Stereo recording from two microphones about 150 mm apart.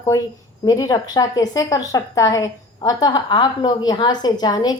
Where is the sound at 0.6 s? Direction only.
25° left (ahead or behind).